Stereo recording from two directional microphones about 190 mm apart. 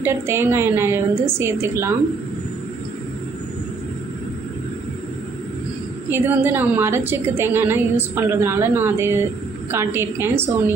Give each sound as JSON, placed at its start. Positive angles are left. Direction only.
{"t": 0.0, "sound": "a woman's voice", "side_deg": -15}
{"t": 6.1, "sound": "a woman's voice", "side_deg": -10}